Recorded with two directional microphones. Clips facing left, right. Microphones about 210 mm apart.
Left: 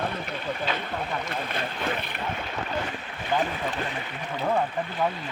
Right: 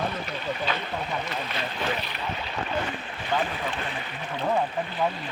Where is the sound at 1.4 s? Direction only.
50° left (ahead or behind).